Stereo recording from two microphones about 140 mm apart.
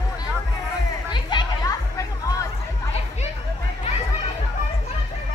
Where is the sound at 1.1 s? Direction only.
35° left (ahead or behind).